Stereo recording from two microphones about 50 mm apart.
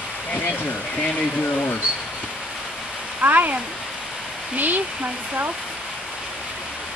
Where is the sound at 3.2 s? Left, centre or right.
Right.